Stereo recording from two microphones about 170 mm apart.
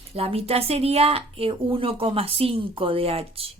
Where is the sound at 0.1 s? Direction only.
35° right (ahead or behind).